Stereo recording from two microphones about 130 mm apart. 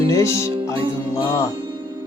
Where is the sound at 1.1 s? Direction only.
25° left (ahead or behind).